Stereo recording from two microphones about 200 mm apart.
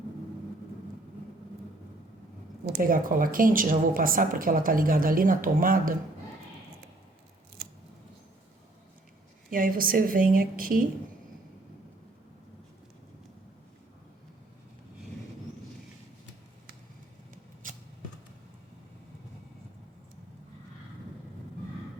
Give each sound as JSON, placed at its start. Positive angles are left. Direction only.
{"t": 2.6, "sound": "speech", "side_deg": -45}
{"t": 9.5, "sound": "speech", "side_deg": -45}
{"t": 17.3, "sound": "a sound", "side_deg": -40}